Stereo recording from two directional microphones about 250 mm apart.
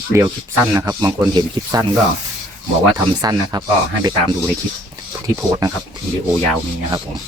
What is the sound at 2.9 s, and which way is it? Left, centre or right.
Speech, centre.